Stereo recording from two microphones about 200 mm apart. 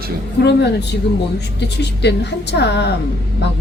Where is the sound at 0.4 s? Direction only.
55° left (ahead or behind).